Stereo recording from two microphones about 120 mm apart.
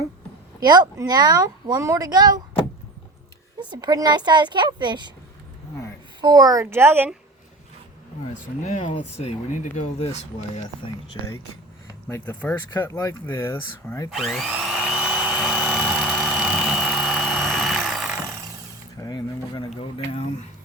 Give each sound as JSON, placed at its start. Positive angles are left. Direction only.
{"t": 0.6, "sound": "speech", "side_deg": -35}
{"t": 3.6, "sound": "speech", "side_deg": -35}
{"t": 6.2, "sound": "speech", "side_deg": -30}
{"t": 8.3, "sound": "speech", "side_deg": 80}
{"t": 12.0, "sound": "speech", "side_deg": 15}
{"t": 14.1, "sound": "a sound", "side_deg": 0}
{"t": 16.1, "sound": "helicopter", "side_deg": 0}
{"t": 17.3, "sound": "vehicle", "side_deg": 0}
{"t": 18.9, "sound": "a sound", "side_deg": 30}